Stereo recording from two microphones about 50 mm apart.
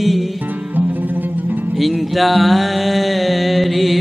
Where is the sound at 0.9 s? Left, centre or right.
Right.